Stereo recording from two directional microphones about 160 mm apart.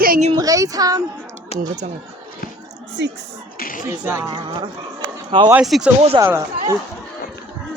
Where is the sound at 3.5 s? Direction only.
60° left (ahead or behind).